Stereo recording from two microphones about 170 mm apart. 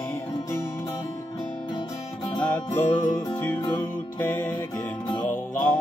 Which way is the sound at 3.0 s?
25° left (ahead or behind).